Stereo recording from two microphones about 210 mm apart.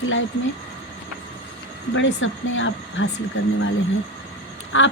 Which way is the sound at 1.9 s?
65° left (ahead or behind).